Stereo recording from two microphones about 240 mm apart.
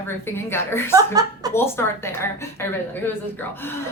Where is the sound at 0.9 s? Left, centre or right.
Centre.